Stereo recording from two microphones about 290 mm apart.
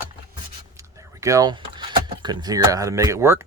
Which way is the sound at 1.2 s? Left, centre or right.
Centre.